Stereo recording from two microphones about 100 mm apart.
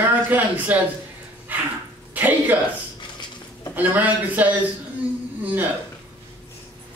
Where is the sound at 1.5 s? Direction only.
15° right (ahead or behind).